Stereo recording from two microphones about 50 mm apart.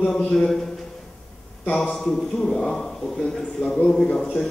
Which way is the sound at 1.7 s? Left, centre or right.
Centre.